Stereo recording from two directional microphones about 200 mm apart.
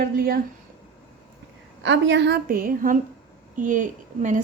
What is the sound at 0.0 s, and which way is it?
Speech, 50° right (ahead or behind).